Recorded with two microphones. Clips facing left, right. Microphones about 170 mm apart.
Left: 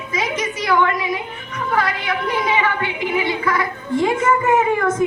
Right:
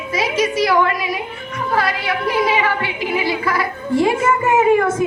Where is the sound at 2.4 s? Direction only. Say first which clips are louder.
Right 3 dB; 30° right (ahead or behind).